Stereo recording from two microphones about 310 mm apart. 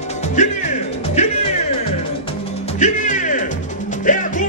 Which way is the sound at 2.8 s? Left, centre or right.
Left.